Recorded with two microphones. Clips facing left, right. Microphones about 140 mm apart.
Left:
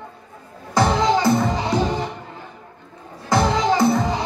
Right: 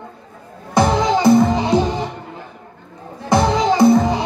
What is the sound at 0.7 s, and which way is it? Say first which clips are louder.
Music: right 2 dB; 20° right (ahead or behind).